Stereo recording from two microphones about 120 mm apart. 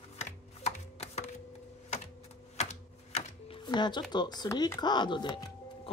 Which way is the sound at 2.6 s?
65° left (ahead or behind).